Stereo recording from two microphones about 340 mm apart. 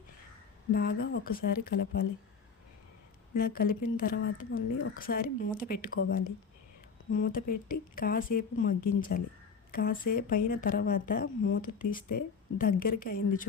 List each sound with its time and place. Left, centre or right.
0.7 s speech: left
3.3 s speech: left